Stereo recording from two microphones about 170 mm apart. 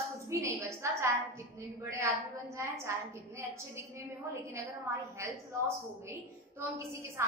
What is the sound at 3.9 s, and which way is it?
A woman's voice, 15° right (ahead or behind).